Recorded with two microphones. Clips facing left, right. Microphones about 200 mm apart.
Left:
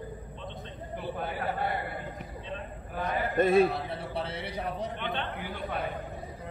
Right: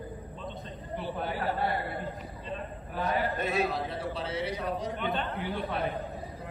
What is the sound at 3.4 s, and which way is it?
A man's voice, 50° left (ahead or behind).